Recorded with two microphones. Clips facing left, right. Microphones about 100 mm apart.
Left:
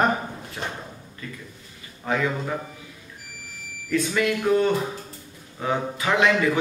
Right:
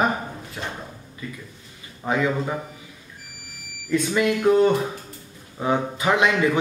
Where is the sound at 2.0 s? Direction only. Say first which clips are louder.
Right 2 dB; 15° right (ahead or behind).